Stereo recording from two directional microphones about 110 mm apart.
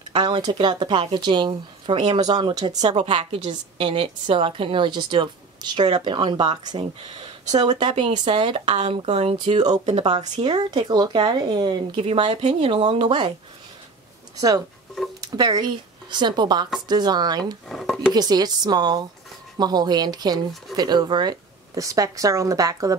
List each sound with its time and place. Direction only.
0.1 s a woman's voice: 45° right (ahead or behind)
3.4 s a woman's voice: 60° right (ahead or behind); by 7.9 s 40° right (ahead or behind)
7.9 s a woman's voice: 50° right (ahead or behind); by 9.7 s 70° right (ahead or behind)
9.8 s speech: 90° right
10.1 s speech: 40° right (ahead or behind)
12.0 s a woman's voice: 55° right (ahead or behind)
15.3 s speech: 40° right (ahead or behind)
17.6 s speech: 5° left (ahead or behind)
18.1 s speech: 35° right (ahead or behind)